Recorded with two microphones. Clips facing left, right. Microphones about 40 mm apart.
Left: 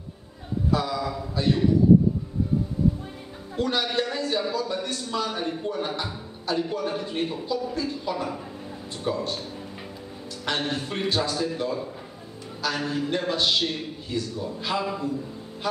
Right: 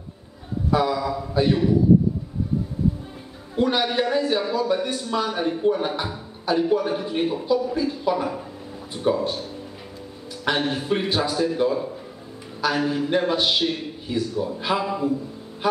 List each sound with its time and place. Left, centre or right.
0.7 s a sound: centre
1.3 s a man's voice: centre
3.5 s a man's voice: centre
10.4 s a man's voice: centre